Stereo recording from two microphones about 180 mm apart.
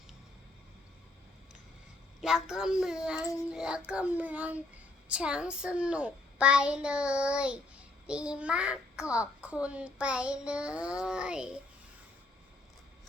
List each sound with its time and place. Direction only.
2.2 s a child's voice: 5° right (ahead or behind)
3.2 s speech: 20° left (ahead or behind)
3.5 s a child's voice: 5° right (ahead or behind)